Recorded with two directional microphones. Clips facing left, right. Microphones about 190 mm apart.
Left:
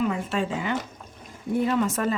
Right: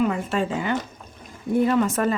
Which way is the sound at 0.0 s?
50° right (ahead or behind).